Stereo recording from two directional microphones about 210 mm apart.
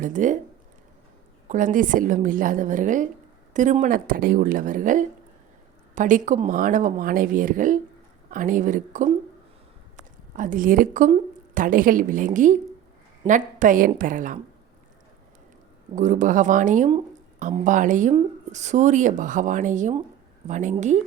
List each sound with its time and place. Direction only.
0.0 s speech: 40° right (ahead or behind)
1.5 s speech: 40° right (ahead or behind)
10.3 s speech: 40° right (ahead or behind)
16.0 s speech: 35° right (ahead or behind)